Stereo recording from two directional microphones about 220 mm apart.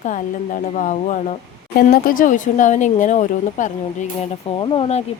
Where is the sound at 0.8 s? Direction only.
35° left (ahead or behind).